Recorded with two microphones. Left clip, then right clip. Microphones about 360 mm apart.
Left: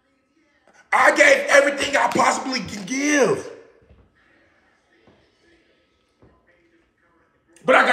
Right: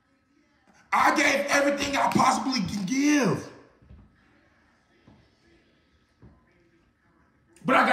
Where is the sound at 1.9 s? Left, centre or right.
Centre.